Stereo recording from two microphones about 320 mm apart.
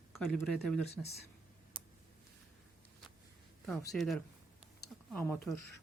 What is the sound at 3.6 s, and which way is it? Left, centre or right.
Speech, centre.